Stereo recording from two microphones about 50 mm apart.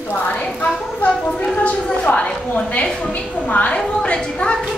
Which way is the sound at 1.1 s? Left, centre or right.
Left.